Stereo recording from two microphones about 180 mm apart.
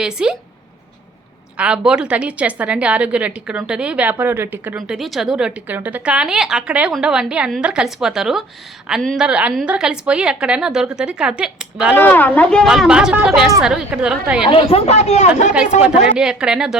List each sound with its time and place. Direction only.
0.0 s a woman's voice: 5° right (ahead or behind)
1.5 s a woman's voice: 5° right (ahead or behind)
11.9 s a woman's voice: 10° left (ahead or behind)
14.5 s speech: 35° left (ahead or behind)
15.8 s a woman's voice: 5° right (ahead or behind)